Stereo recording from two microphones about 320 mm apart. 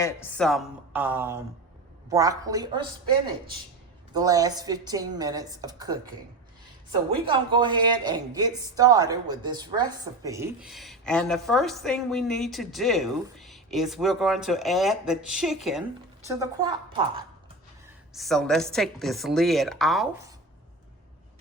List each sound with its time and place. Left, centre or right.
0.0 s a woman's voice: centre
4.1 s speech: centre
7.3 s a woman's voice: centre
16.2 s speech: centre
18.1 s a woman's voice: centre